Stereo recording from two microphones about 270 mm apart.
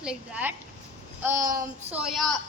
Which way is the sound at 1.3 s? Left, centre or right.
Right.